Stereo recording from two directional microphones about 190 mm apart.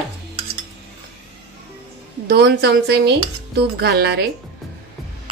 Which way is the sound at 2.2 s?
60° right (ahead or behind).